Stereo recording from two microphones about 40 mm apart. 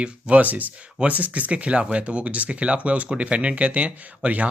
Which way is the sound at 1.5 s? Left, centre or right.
Right.